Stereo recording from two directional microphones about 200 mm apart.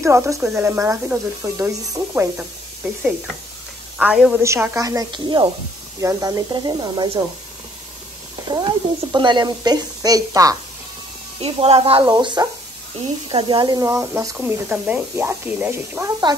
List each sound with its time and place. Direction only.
0.0 s speech: 15° right (ahead or behind)
4.0 s speech: 5° right (ahead or behind); by 7.2 s 20° right (ahead or behind)
8.5 s speech: 20° right (ahead or behind)
11.4 s speech: 30° right (ahead or behind)